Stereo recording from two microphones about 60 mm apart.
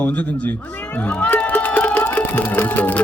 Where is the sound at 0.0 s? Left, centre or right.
Left.